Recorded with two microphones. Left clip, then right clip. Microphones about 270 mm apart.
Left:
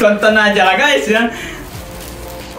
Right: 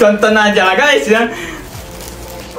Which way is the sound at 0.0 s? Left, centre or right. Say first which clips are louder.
Right 1 dB; centre.